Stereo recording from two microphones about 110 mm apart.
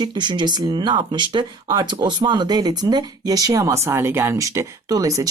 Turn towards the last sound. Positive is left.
turn(degrees=-30)  # may be behind; listen again after turning